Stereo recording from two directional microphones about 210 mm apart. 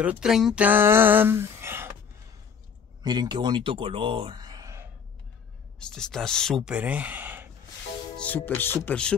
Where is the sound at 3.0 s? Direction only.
20° right (ahead or behind).